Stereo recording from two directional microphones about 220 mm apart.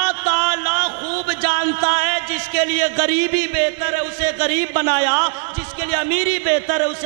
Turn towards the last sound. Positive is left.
turn(degrees=-15)  # may be behind; listen again after turning